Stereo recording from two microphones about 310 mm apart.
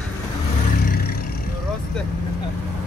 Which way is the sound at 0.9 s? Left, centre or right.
Left.